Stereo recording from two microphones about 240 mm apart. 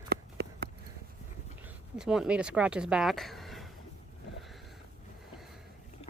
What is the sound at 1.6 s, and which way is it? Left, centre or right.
Speech, centre.